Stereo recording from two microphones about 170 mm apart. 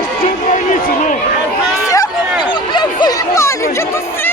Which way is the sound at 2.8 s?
20° left (ahead or behind).